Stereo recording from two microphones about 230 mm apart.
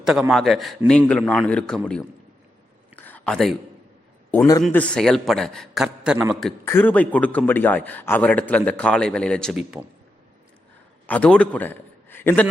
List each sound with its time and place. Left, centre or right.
0.0 s a man's voice: centre
2.9 s a sound: centre
4.3 s a man's voice: centre
6.7 s a man's voice: centre
11.0 s a man's voice: centre